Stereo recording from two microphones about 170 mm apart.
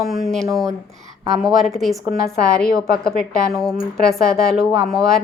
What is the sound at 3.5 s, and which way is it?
Speech, centre (ahead or behind).